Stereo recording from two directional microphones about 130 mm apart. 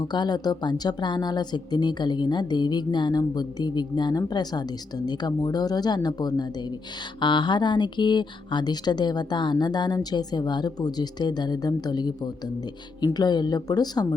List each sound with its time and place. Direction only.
0.0 s speech: 35° left (ahead or behind)